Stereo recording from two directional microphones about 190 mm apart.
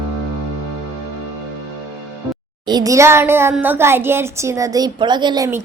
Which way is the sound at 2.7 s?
20° right (ahead or behind).